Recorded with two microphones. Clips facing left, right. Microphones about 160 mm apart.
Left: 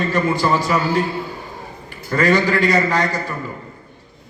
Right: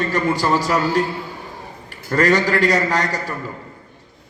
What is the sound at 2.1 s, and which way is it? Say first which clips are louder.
A man's voice: even; 40° right (ahead or behind).